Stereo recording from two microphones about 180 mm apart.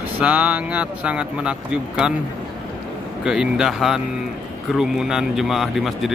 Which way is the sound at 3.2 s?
5° right (ahead or behind).